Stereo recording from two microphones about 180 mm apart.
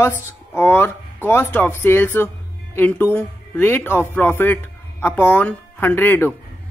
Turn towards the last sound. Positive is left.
turn(degrees=10)  # may be behind; listen again after turning